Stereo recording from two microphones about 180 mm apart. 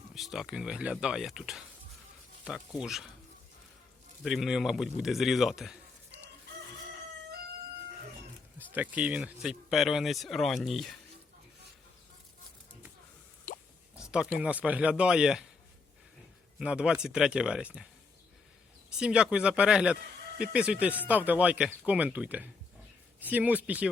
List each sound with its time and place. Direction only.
0.1 s speech: centre (ahead or behind)
4.2 s speech: centre (ahead or behind)
8.5 s speech: 10° right (ahead or behind)
13.5 s drip: 50° left (ahead or behind)
14.1 s speech: 5° right (ahead or behind)
16.6 s speech: 5° right (ahead or behind)
18.9 s speech: 5° right (ahead or behind)